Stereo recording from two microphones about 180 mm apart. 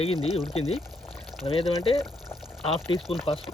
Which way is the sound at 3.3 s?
30° left (ahead or behind).